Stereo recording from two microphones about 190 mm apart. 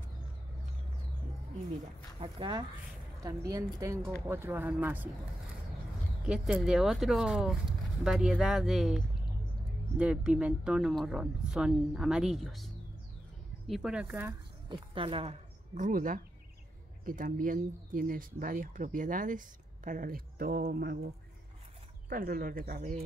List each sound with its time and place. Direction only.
2.1 s a woman's voice: 30° right (ahead or behind); by 5.1 s 10° right (ahead or behind)
6.2 s speech: 5° right (ahead or behind)
14.7 s speech: 30° right (ahead or behind); by 21.1 s 55° right (ahead or behind)
22.1 s speech: 50° right (ahead or behind)